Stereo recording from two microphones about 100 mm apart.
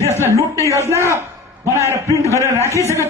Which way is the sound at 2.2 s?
30° right (ahead or behind).